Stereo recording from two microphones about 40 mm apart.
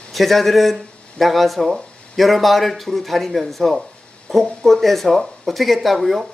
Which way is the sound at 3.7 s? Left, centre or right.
Centre.